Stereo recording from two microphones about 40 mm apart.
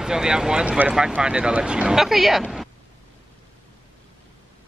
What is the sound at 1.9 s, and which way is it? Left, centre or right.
Speech, centre.